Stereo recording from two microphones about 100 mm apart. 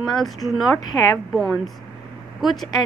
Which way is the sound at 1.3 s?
Centre (ahead or behind).